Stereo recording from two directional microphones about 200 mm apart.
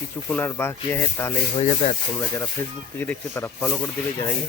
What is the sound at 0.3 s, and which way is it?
Speech, 10° left (ahead or behind).